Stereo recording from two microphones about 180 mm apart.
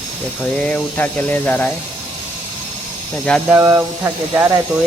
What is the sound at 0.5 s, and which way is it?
Speech, 5° left (ahead or behind).